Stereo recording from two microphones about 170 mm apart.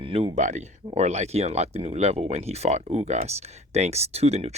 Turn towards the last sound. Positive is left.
turn(degrees=-40)  # may be behind; listen again after turning